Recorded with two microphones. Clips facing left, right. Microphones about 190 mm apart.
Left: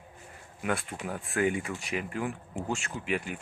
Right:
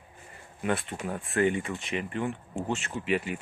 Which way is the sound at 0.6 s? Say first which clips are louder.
Right 2 dB; centre (ahead or behind).